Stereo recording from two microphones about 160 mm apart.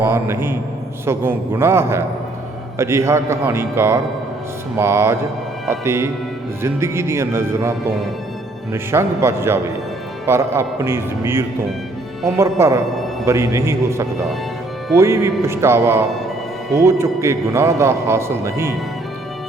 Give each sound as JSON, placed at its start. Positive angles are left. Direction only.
{"t": 0.0, "sound": "a man's voice", "side_deg": -15}
{"t": 8.7, "sound": "a man's voice", "side_deg": -15}